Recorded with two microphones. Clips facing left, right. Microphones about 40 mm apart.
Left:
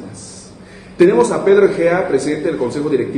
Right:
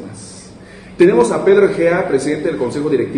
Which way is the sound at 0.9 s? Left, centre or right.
Centre.